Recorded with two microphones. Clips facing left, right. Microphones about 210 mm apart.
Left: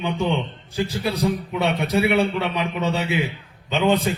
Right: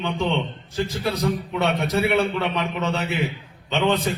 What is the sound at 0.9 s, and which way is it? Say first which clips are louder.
Speech: left 1 dB; 30° left (ahead or behind).